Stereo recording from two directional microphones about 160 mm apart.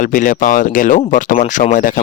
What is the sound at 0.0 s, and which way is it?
Speech, 60° left (ahead or behind).